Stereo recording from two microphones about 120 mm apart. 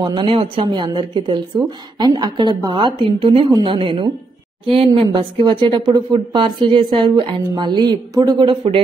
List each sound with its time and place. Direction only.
0.0 s a woman's voice: 40° right (ahead or behind)